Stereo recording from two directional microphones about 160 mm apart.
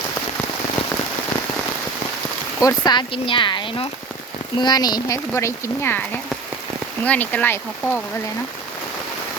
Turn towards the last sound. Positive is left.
turn(degrees=10)  # may be behind; listen again after turning